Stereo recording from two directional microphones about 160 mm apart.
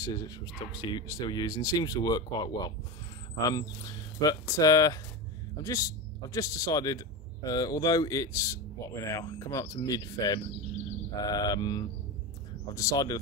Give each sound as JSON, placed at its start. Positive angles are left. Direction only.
{"t": 0.0, "sound": "speech", "side_deg": 25}
{"t": 4.2, "sound": "speech", "side_deg": 20}